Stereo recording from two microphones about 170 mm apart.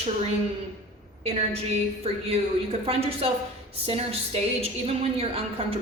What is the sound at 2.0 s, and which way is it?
A woman's voice, 35° right (ahead or behind).